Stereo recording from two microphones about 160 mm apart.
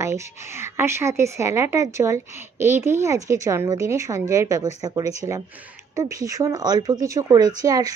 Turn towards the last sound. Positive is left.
turn(degrees=-25)  # may be behind; listen again after turning